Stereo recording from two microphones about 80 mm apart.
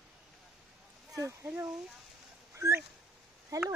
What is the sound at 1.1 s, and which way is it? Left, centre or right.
Speech, right.